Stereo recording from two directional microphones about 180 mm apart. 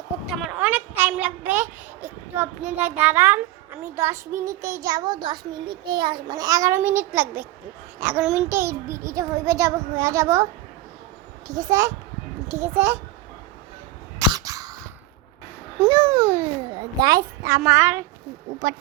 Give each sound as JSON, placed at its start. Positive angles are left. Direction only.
{"t": 0.3, "sound": "a child's voice", "side_deg": -10}
{"t": 8.4, "sound": "a child's voice", "side_deg": -15}
{"t": 14.2, "sound": "a sound", "side_deg": -20}
{"t": 15.8, "sound": "babbling", "side_deg": -25}
{"t": 17.4, "sound": "a child's voice", "side_deg": -15}